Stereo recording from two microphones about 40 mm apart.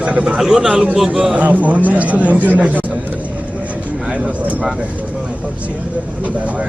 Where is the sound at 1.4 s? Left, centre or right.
Right.